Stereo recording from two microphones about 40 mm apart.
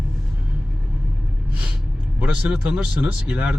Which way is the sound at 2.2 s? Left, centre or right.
Right.